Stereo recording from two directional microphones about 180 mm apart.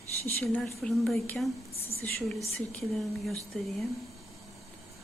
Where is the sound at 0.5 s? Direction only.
5° left (ahead or behind).